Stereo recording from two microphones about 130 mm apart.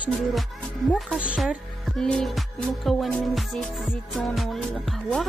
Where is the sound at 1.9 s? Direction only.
5° left (ahead or behind).